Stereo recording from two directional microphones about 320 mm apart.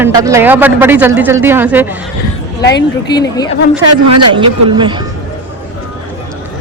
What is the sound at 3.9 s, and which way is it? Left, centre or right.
Speech, right.